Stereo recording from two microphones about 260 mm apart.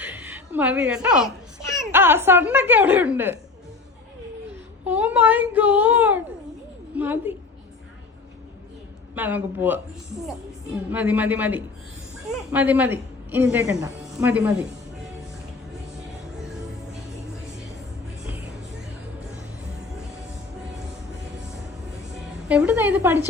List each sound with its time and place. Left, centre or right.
0.0 s a sound: centre
1.8 s a woman's voice: centre
4.9 s a woman's voice: centre
9.1 s a woman's voice: centre
10.9 s a woman's voice: centre
22.4 s a woman's voice: centre